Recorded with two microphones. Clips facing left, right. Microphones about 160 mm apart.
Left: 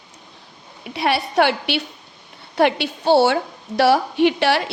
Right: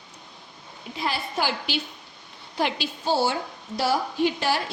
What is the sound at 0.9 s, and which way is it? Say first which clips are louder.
A woman's voice: left 10 dB; 70° left (ahead or behind).